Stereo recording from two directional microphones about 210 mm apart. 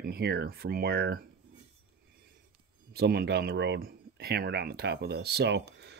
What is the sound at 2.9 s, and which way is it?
Speech, 50° right (ahead or behind).